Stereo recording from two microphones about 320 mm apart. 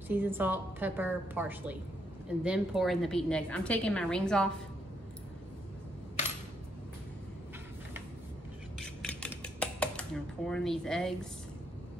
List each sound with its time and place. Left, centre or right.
0.1 s a woman's voice: centre
8.7 s dishes: centre